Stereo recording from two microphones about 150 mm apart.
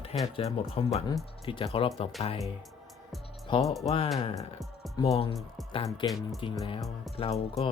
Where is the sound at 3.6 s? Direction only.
Centre (ahead or behind).